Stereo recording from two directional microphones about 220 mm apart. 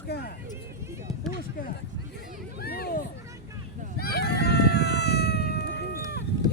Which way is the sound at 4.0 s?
45° left (ahead or behind).